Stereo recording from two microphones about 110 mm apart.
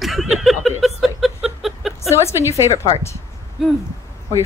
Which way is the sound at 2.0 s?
25° left (ahead or behind).